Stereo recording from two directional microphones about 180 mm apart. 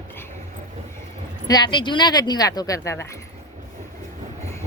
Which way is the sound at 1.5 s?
25° left (ahead or behind).